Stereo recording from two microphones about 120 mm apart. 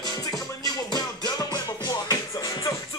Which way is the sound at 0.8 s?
35° left (ahead or behind).